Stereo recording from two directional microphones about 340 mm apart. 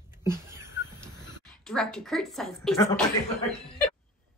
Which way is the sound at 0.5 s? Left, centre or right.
Centre.